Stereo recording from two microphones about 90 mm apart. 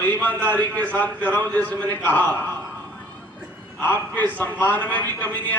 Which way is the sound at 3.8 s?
20° left (ahead or behind).